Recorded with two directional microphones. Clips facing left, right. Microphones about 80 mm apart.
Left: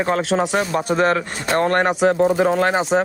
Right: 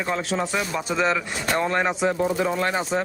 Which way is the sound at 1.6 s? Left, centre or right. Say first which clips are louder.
Left 7 dB; left.